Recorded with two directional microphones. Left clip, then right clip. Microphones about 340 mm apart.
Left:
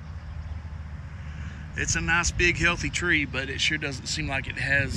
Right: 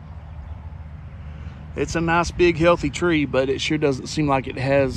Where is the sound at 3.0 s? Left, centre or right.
Centre.